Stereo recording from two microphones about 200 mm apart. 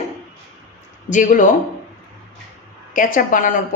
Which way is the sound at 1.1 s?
40° left (ahead or behind).